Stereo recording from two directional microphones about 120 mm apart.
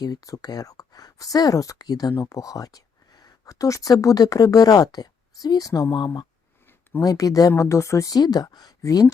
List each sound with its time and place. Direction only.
0.0 s speech: 30° left (ahead or behind)